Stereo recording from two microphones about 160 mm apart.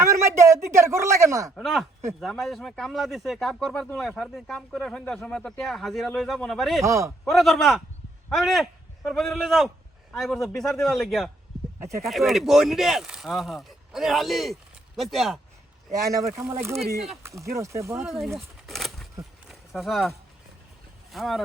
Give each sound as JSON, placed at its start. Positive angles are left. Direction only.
{"t": 0.0, "sound": "a man's voice", "side_deg": -20}
{"t": 1.5, "sound": "speech", "side_deg": 0}
{"t": 6.8, "sound": "speech", "side_deg": -20}
{"t": 7.3, "sound": "speech", "side_deg": 0}
{"t": 15.9, "sound": "a man's voice", "side_deg": -20}
{"t": 18.0, "sound": "speech", "side_deg": 0}
{"t": 19.5, "sound": "a sound", "side_deg": 0}
{"t": 21.1, "sound": "speech", "side_deg": 0}